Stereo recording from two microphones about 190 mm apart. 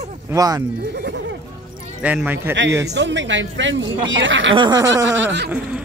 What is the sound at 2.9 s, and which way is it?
Speech, 70° right (ahead or behind).